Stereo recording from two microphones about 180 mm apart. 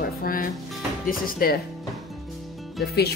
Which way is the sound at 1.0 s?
55° left (ahead or behind).